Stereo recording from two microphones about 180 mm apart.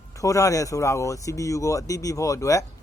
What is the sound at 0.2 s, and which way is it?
Speech, 20° left (ahead or behind).